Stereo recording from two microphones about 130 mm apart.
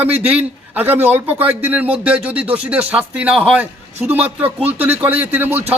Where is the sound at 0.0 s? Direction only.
10° right (ahead or behind).